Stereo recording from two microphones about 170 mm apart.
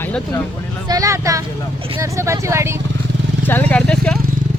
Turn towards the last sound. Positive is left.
turn(degrees=5)  # may be behind; listen again after turning